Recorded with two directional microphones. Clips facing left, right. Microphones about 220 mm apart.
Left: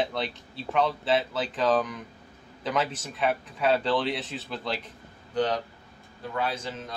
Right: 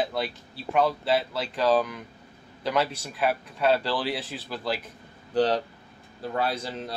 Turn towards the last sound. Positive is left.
turn(degrees=-35)  # may be behind; listen again after turning